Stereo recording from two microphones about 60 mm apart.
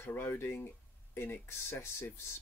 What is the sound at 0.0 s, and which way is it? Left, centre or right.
Speech, left.